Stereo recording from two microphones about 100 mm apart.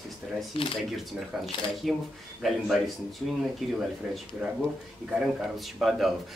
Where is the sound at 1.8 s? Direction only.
Centre (ahead or behind).